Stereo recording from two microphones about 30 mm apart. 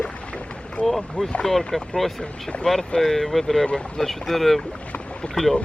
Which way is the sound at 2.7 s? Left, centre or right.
Left.